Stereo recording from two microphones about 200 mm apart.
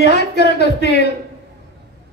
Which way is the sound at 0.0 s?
55° left (ahead or behind).